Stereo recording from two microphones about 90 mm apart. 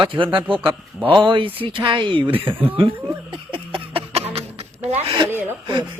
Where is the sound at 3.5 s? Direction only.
80° right.